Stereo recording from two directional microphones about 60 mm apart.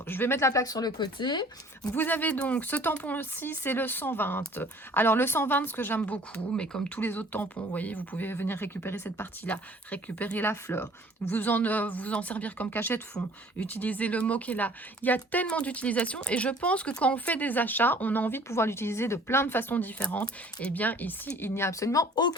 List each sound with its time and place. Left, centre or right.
0.1 s speech: left
0.6 s speech: left
2.0 s speech: left
6.0 s speech: centre
7.0 s speech: left
9.4 s speech: left
20.0 s speech: centre; by 21.8 s left
21.8 s speech: left